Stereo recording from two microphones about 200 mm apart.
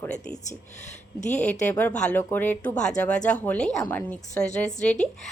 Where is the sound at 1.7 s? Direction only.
10° left (ahead or behind).